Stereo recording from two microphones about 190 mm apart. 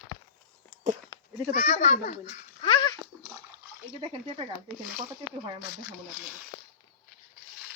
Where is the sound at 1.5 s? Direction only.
35° left (ahead or behind).